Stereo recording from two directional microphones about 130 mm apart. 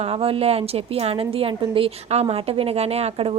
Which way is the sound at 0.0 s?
50° right (ahead or behind).